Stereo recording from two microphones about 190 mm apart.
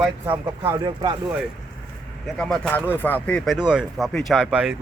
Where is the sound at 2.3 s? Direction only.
5° left (ahead or behind).